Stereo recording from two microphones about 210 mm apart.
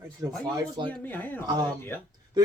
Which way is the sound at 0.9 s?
10° left (ahead or behind).